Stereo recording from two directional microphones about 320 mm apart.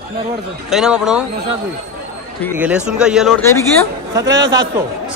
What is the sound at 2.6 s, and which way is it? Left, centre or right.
Speech, centre.